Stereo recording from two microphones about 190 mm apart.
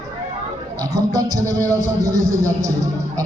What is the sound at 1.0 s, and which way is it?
A man's voice, 20° right (ahead or behind).